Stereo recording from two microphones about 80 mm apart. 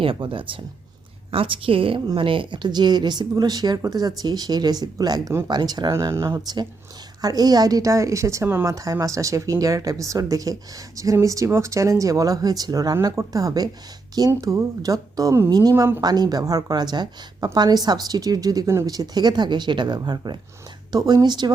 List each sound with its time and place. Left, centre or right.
0.0 s a woman's voice: right
5.9 s speech: right
7.2 s speech: right
8.6 s a woman's voice: right